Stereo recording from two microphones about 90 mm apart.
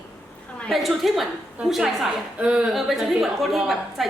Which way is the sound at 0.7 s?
Centre (ahead or behind).